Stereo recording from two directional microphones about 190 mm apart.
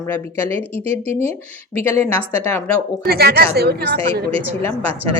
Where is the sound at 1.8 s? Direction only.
10° left (ahead or behind).